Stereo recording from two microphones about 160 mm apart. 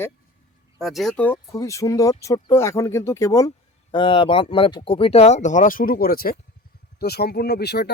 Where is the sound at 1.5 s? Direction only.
20° left (ahead or behind).